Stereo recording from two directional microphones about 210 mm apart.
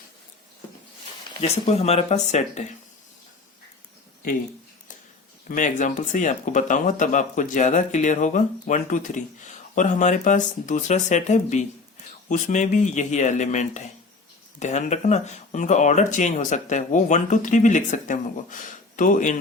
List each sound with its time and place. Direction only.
1.3 s speech: 30° left (ahead or behind)
5.5 s speech: 35° left (ahead or behind)